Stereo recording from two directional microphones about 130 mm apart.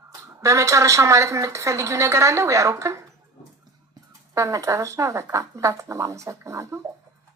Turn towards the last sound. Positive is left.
turn(degrees=-20)  # may be behind; listen again after turning